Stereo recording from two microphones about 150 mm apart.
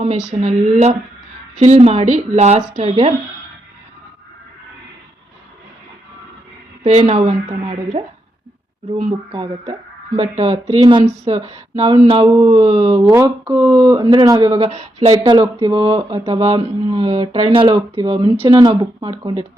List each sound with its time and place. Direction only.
0.0 s a woman's voice: 50° right (ahead or behind)
6.8 s a woman's voice: 45° right (ahead or behind)
9.3 s a woman's voice: 35° right (ahead or behind)
10.8 s a woman's voice: 30° right (ahead or behind)
12.8 s speech: 20° right (ahead or behind)